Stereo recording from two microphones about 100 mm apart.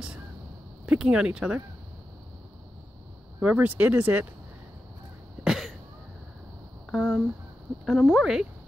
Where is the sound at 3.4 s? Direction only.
15° right (ahead or behind).